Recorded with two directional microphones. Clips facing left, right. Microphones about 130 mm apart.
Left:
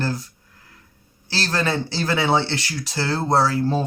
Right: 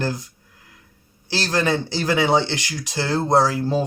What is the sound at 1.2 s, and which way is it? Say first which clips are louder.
Speech: right 2 dB; 20° right (ahead or behind).